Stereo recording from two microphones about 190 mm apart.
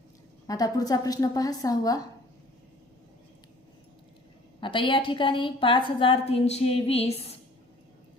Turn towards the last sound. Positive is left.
turn(degrees=30)  # may be behind; listen again after turning